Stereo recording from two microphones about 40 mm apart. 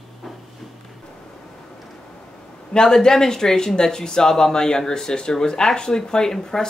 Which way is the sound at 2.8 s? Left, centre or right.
Centre.